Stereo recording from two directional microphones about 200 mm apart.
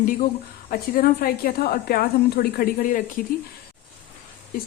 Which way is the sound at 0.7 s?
45° left (ahead or behind).